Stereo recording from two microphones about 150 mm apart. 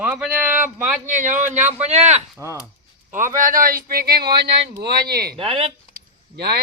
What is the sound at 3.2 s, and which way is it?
Speech, 65° right (ahead or behind).